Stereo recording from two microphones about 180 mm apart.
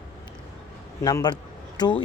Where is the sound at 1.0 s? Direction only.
20° left (ahead or behind).